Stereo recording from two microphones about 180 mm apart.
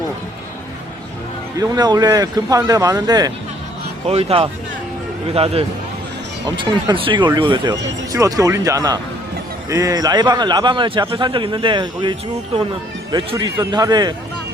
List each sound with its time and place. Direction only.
1.5 s speech: 20° right (ahead or behind)
4.0 s speech: 35° right (ahead or behind)